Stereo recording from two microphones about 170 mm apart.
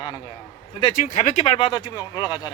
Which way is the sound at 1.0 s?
45° left (ahead or behind).